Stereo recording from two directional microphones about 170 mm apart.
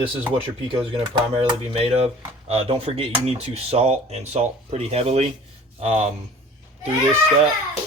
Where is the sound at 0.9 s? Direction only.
30° right (ahead or behind).